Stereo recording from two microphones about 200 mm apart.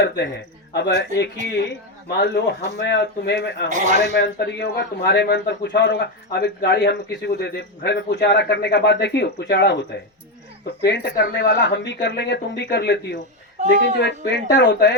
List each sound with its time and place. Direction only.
0.7 s a man's voice: 55° left (ahead or behind)
3.7 s a man's voice: 40° right (ahead or behind)
3.9 s a man's voice: 55° left (ahead or behind)